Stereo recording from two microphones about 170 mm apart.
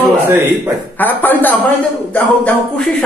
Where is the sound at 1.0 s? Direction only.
10° left (ahead or behind).